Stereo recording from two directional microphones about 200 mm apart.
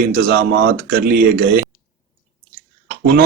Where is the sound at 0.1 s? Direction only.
50° right (ahead or behind).